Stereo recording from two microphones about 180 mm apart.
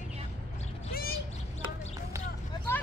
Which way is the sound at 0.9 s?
55° left (ahead or behind).